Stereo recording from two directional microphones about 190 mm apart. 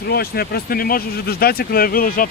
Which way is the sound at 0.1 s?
55° left (ahead or behind).